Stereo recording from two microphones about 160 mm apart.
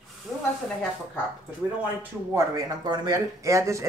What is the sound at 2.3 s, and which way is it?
Speech, 20° right (ahead or behind).